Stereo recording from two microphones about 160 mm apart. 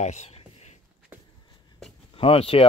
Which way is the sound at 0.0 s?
45° left (ahead or behind).